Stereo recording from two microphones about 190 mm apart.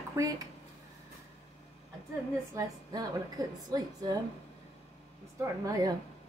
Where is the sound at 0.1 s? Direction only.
15° right (ahead or behind).